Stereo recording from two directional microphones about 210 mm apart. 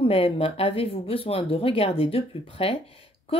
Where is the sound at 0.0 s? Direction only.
25° left (ahead or behind).